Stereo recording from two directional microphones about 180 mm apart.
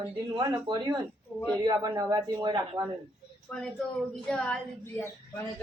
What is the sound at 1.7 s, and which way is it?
A woman's voice, 20° right (ahead or behind).